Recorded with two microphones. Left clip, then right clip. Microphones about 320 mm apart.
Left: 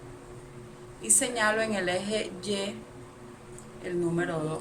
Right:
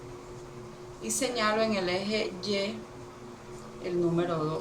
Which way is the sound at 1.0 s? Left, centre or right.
Left.